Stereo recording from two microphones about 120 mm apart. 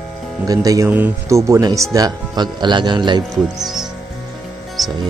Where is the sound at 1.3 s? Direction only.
30° right (ahead or behind).